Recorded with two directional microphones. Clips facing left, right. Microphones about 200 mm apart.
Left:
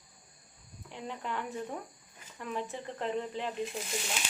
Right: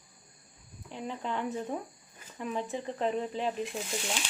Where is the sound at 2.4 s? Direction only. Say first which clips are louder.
Right 3 dB; 20° right (ahead or behind).